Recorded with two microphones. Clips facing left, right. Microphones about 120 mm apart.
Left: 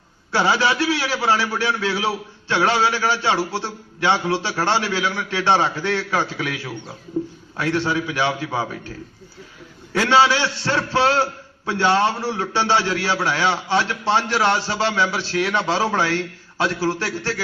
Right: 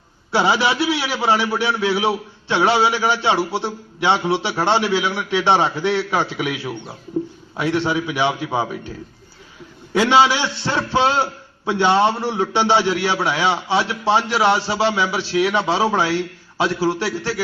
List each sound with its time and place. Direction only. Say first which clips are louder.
0.3 s a man's voice: right 1 dB; 15° right (ahead or behind)
9.9 s a man's voice: right 2 dB; 15° right (ahead or behind)